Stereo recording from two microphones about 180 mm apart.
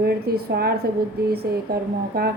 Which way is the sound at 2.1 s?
60° right (ahead or behind).